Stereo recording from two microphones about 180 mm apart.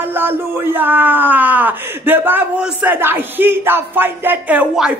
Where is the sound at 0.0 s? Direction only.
10° right (ahead or behind).